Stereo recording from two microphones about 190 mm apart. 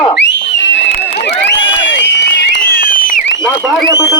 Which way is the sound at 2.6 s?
50° left (ahead or behind).